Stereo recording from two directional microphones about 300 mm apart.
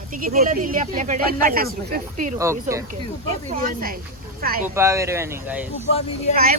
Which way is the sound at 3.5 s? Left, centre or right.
Right.